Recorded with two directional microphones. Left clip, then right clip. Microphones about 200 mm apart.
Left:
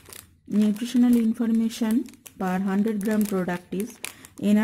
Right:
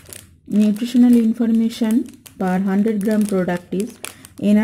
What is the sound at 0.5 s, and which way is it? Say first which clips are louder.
Speech: right 6 dB; 5° left (ahead or behind).